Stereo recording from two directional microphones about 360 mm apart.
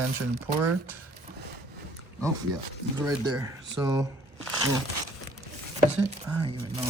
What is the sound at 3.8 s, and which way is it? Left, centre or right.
Speech, centre.